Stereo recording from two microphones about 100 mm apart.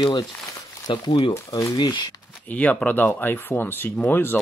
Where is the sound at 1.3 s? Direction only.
30° left (ahead or behind).